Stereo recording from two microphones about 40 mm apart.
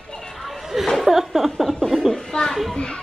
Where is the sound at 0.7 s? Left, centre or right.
Centre.